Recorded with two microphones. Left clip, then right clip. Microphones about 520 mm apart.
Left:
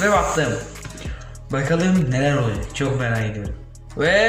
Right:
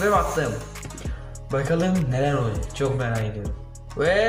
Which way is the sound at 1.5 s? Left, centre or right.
Right.